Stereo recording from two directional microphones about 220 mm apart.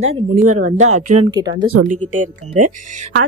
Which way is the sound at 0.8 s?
90° right.